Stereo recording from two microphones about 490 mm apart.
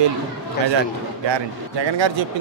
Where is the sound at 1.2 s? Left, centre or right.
Right.